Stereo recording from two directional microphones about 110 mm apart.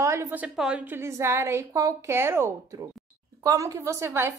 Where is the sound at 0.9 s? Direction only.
25° right (ahead or behind).